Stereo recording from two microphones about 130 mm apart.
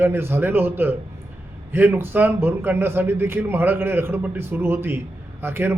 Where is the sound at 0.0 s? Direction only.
20° right (ahead or behind).